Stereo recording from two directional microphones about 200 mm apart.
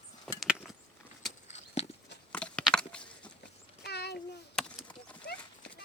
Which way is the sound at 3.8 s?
55° left (ahead or behind).